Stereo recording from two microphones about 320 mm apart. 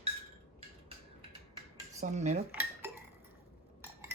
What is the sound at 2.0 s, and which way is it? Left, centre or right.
Cutlery, right.